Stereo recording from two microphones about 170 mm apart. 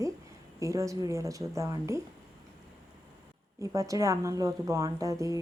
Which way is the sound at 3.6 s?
20° right (ahead or behind).